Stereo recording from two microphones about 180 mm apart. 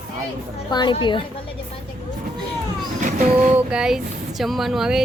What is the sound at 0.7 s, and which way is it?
Speech, 25° left (ahead or behind).